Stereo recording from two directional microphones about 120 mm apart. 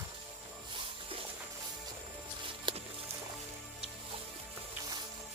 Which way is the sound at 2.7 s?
40° right (ahead or behind).